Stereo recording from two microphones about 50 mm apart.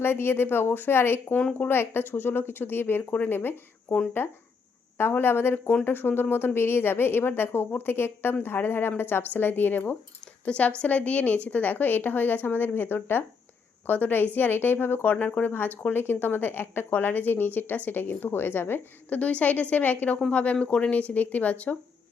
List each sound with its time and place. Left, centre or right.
0.0 s a woman's voice: left
10.4 s speech: left
10.8 s a woman's voice: left
19.1 s a woman's voice: left
20.3 s speech: left
20.9 s a woman's voice: left